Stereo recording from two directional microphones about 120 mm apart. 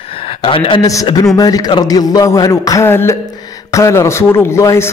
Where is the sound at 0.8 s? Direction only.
30° left (ahead or behind).